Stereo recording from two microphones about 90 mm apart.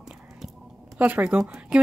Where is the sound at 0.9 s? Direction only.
20° right (ahead or behind).